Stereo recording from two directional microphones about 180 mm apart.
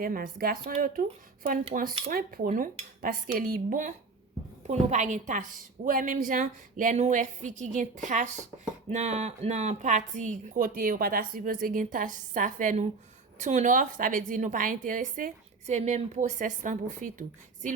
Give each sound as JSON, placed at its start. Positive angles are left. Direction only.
{"t": 0.0, "sound": "speech", "side_deg": -55}
{"t": 1.7, "sound": "speech", "side_deg": -50}